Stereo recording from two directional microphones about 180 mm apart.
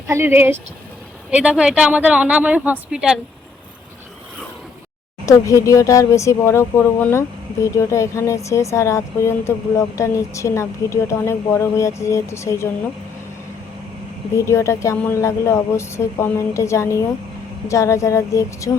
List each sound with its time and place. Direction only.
0.1 s speech: 10° right (ahead or behind)
5.2 s speech: 15° left (ahead or behind)
14.3 s speech: 15° left (ahead or behind)